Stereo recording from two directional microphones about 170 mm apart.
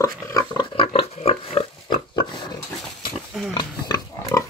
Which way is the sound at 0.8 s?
35° left (ahead or behind).